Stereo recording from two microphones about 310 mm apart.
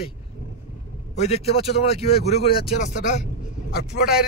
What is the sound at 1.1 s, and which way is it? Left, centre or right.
A man's voice, left.